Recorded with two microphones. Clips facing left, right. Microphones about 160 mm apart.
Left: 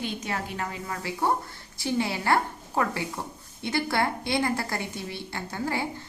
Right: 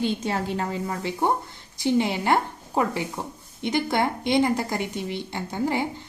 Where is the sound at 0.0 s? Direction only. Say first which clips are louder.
Right 6 dB; 30° right (ahead or behind).